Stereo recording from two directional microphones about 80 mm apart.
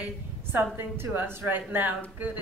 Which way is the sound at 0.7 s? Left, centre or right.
Right.